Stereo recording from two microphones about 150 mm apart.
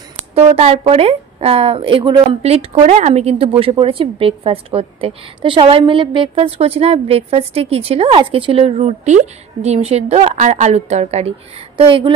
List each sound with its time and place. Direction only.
0.3 s speech: 40° right (ahead or behind)